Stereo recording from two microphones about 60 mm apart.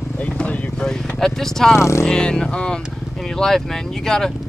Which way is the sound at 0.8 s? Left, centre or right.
Centre.